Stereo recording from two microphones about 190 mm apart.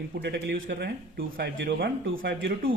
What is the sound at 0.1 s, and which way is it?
Speech, 60° right (ahead or behind).